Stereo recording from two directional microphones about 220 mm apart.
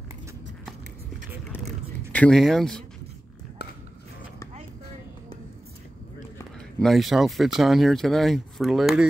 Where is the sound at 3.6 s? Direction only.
50° left (ahead or behind).